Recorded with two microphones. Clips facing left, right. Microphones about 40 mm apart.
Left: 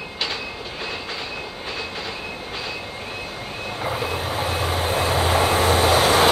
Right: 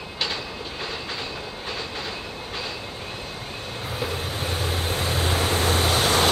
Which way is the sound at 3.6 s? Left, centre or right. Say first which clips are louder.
Left 5 dB; centre.